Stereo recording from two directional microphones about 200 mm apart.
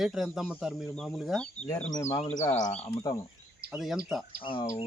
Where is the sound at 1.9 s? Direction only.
20° left (ahead or behind).